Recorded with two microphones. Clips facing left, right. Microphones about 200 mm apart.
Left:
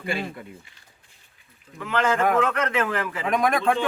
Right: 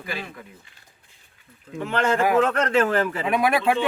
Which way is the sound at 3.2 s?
5° right (ahead or behind).